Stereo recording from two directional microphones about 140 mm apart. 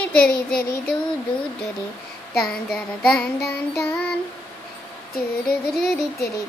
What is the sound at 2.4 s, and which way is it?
Child singing, 5° left (ahead or behind).